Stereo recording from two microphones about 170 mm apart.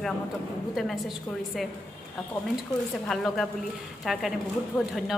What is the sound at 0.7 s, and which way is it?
Speech, centre (ahead or behind).